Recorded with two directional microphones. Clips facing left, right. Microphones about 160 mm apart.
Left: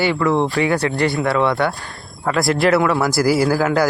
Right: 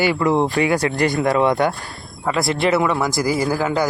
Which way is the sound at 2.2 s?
Centre (ahead or behind).